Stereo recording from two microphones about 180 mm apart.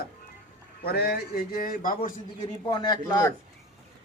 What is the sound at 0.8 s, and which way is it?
A man's voice, 60° left (ahead or behind).